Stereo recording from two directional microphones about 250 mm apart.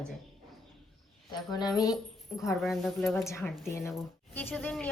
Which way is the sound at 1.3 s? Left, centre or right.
Centre.